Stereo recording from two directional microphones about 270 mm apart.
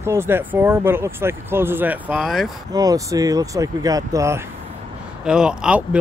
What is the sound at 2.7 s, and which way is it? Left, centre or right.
Speech, centre.